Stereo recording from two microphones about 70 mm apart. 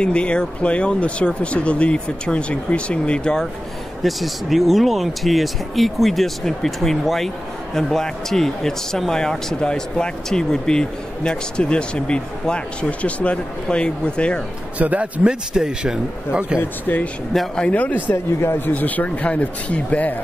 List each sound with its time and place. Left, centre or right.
0.0 s speech: centre
4.0 s speech: centre
14.8 s a man's voice: right
15.2 s speech: centre
16.8 s speech: left
17.3 s speech: centre
17.6 s speech: left
18.1 s speech: left
18.7 s speech: left